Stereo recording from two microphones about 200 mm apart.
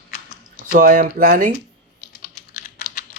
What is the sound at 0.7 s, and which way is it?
Speech, 45° right (ahead or behind).